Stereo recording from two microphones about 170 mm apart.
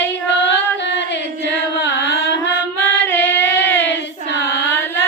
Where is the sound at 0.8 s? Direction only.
90° left.